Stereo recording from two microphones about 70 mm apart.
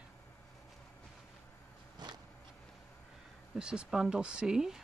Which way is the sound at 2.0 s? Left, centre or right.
Right.